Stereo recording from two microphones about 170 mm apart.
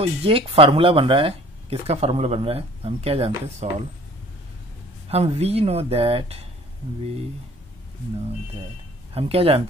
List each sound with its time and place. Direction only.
0.0 s speech: 35° right (ahead or behind)
5.0 s speech: 35° right (ahead or behind)
9.1 s speech: 35° right (ahead or behind)